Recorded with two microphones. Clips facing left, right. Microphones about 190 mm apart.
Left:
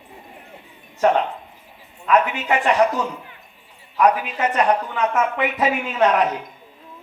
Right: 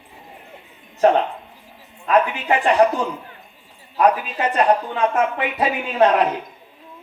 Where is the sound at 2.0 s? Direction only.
30° right (ahead or behind).